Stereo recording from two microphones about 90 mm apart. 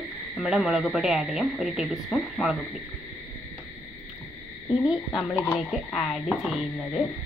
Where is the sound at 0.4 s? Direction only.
5° right (ahead or behind).